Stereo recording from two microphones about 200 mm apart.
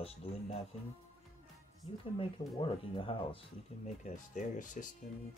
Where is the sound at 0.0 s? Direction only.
30° left (ahead or behind).